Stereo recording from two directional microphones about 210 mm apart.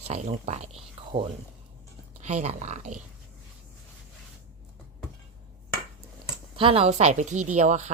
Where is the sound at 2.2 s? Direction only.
35° right (ahead or behind).